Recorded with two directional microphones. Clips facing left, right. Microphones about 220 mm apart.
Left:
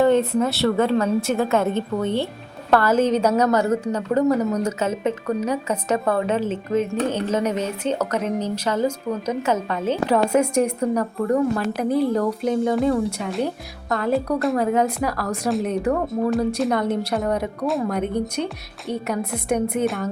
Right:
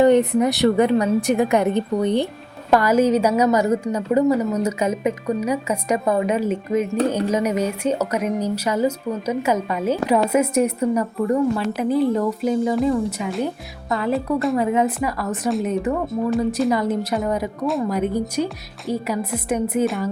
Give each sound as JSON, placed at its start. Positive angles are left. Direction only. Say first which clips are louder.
{"t": 0.0, "sound": "a woman's voice", "louder": "right 3 dB", "side_deg": -15}